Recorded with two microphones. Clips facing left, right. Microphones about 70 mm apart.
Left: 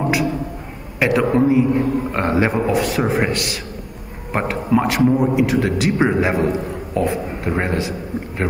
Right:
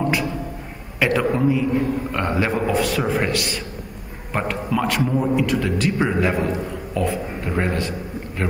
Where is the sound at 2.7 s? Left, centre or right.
Centre.